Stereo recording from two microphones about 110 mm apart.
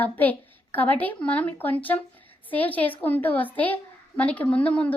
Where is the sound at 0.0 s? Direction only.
15° left (ahead or behind).